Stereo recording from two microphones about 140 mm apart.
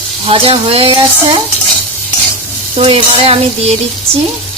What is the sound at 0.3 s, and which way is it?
Speech, 40° right (ahead or behind).